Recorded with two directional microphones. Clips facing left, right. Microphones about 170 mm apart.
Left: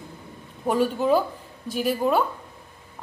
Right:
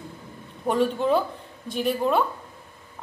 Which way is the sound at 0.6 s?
5° left (ahead or behind).